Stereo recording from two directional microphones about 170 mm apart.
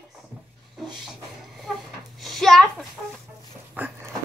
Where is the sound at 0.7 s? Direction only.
Centre (ahead or behind).